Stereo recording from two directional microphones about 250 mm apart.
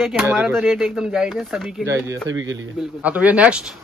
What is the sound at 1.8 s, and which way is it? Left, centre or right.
Speech, right.